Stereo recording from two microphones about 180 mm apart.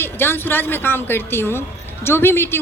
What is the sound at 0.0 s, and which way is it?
A woman's voice, 10° left (ahead or behind).